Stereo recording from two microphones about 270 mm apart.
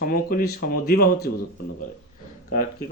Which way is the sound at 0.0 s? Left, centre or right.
Left.